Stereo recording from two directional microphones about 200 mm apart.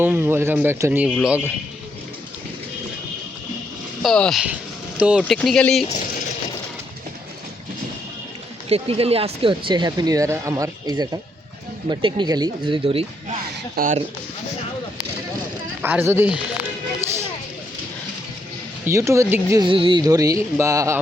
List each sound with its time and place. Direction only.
0.0 s speech: 10° right (ahead or behind)
4.0 s speech: centre (ahead or behind)
5.4 s speech: 5° left (ahead or behind)
8.7 s speech: 30° right (ahead or behind)
13.7 s speech: 40° right (ahead or behind)
15.8 s speech: 10° right (ahead or behind)
18.9 s speech: 15° right (ahead or behind)